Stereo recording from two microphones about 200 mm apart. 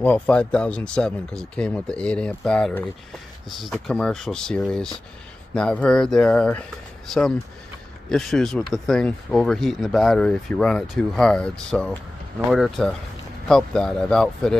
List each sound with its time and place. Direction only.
0.0 s speech: 5° left (ahead or behind)
8.1 s speech: centre (ahead or behind)